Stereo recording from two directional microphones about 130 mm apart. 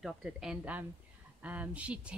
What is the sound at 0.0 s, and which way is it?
A woman's voice, centre (ahead or behind).